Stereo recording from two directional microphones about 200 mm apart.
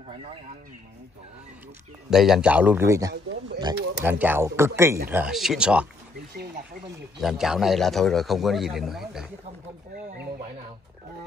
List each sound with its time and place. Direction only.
2.0 s a man's voice: centre (ahead or behind)
3.1 s speech: 60° right (ahead or behind)
4.0 s a man's voice: 10° right (ahead or behind)
7.2 s a man's voice: centre (ahead or behind)